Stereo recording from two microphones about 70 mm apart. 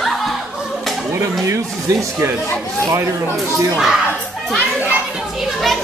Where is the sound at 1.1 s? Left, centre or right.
Right.